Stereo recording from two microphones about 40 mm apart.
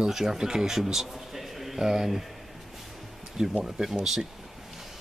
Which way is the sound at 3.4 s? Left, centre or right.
Centre.